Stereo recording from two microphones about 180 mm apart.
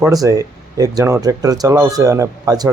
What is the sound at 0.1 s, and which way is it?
Speech, 20° right (ahead or behind).